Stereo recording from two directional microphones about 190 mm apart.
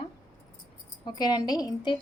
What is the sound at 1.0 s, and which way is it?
Speech, 20° left (ahead or behind).